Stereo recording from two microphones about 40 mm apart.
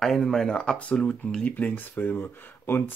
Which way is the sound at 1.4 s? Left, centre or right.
Left.